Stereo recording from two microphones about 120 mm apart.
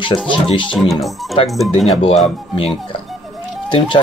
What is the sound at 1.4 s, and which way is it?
Speech, 50° left (ahead or behind).